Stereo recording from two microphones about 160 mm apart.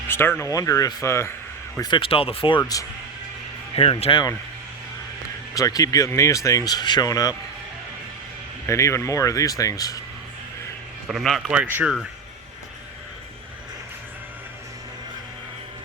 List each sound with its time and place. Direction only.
0.1 s speech: 15° left (ahead or behind)
1.8 s speech: 30° left (ahead or behind)
3.8 s speech: 35° left (ahead or behind)
5.5 s speech: 20° left (ahead or behind)
8.6 s speech: 20° left (ahead or behind)
11.1 s speech: centre (ahead or behind)